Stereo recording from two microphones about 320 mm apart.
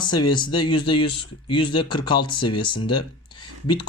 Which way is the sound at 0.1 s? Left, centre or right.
Centre.